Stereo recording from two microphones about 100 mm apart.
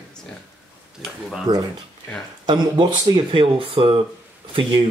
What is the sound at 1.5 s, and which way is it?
Speech, 40° right (ahead or behind).